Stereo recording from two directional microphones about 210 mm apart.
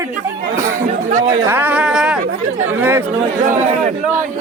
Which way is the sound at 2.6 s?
10° right (ahead or behind).